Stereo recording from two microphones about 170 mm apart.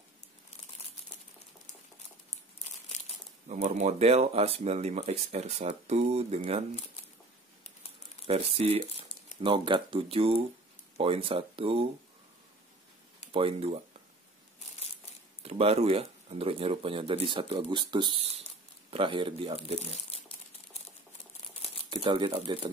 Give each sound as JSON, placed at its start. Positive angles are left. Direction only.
{"t": 2.6, "sound": "crumpling", "side_deg": 40}
{"t": 3.4, "sound": "speech", "side_deg": -45}
{"t": 8.3, "sound": "speech", "side_deg": -35}
{"t": 13.3, "sound": "speech", "side_deg": -30}
{"t": 15.4, "sound": "speech", "side_deg": -35}
{"t": 21.9, "sound": "speech", "side_deg": -30}